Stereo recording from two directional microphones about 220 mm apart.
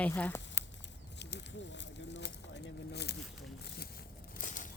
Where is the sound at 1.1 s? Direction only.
50° left (ahead or behind).